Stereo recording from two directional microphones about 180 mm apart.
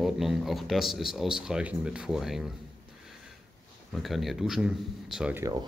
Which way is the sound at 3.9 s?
Centre (ahead or behind).